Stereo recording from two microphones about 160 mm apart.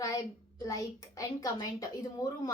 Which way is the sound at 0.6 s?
20° left (ahead or behind).